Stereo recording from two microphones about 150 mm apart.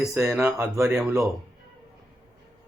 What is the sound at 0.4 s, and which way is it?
Speech, 10° right (ahead or behind).